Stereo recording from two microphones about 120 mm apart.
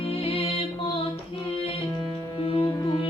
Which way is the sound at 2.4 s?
45° left (ahead or behind).